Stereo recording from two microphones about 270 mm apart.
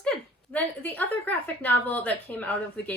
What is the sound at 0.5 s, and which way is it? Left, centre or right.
A woman's voice, centre.